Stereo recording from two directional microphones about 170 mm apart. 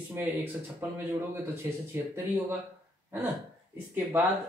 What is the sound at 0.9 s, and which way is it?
Speech, 15° right (ahead or behind).